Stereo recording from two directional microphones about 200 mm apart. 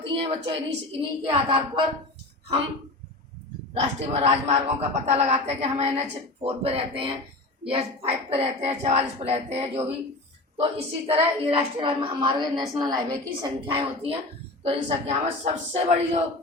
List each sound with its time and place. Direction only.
0.0 s a woman's voice: 25° right (ahead or behind)
3.8 s a woman's voice: 35° right (ahead or behind)